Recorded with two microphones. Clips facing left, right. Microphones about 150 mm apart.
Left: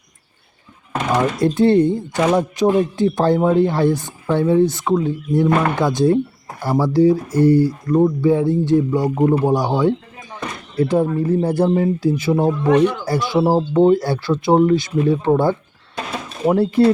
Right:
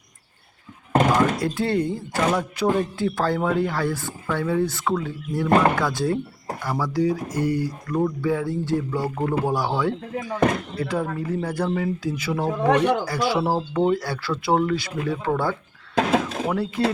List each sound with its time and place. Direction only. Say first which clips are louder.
1.4 s speech: left 9 dB; 20° left (ahead or behind)
12.8 s speech: left 3 dB; 55° right (ahead or behind)
13.1 s speech: left 5 dB; 30° left (ahead or behind)
16.0 s mechanisms: right 5 dB; 90° right